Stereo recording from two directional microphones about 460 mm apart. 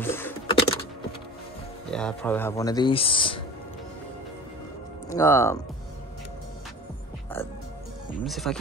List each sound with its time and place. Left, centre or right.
0.0 s computer keyboard: centre
1.9 s speech: centre
5.1 s speech: centre
7.3 s music: centre
8.2 s speech: centre